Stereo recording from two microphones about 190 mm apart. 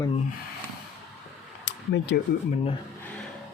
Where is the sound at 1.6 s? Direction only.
65° left (ahead or behind).